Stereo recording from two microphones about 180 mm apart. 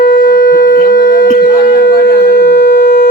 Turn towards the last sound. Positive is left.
turn(degrees=65)  # may be behind; listen again after turning